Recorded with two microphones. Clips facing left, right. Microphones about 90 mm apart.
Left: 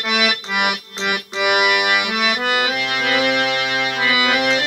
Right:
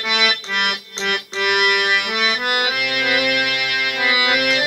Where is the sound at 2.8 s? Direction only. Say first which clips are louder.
Even; 30° left (ahead or behind).